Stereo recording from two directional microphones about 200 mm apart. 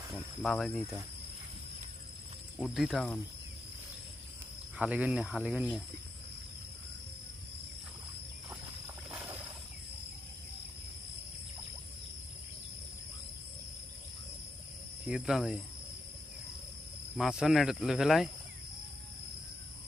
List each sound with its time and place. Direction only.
0.4 s speech: centre (ahead or behind)
2.6 s speech: centre (ahead or behind)
4.8 s speech: 5° right (ahead or behind)
9.0 s a sound: 5° right (ahead or behind)
15.0 s speech: centre (ahead or behind)
17.2 s speech: centre (ahead or behind)